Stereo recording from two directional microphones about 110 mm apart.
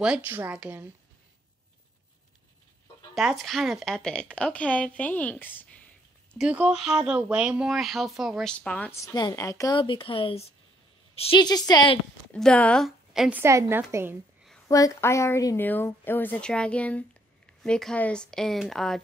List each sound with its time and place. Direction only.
0.0 s a woman's voice: 5° right (ahead or behind)
3.2 s a woman's voice: centre (ahead or behind); by 5.9 s 15° left (ahead or behind)
6.3 s speech: 10° right (ahead or behind)
8.5 s a woman's voice: 10° left (ahead or behind)
8.9 s a woman's voice: 30° left (ahead or behind)
9.8 s a woman's voice: 50° left (ahead or behind)
11.3 s a woman's voice: 40° left (ahead or behind)
12.3 s a woman's voice: 10° left (ahead or behind)
12.8 s a woman's voice: 5° right (ahead or behind)
13.3 s a woman's voice: 25° right (ahead or behind)
14.7 s a woman's voice: 25° left (ahead or behind); by 18.9 s centre (ahead or behind)